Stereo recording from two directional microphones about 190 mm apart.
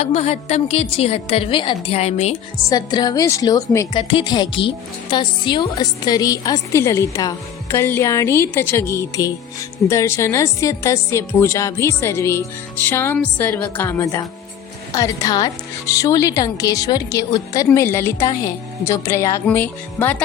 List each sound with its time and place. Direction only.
0.0 s a woman's voice: 35° left (ahead or behind)
2.6 s speech: 20° left (ahead or behind)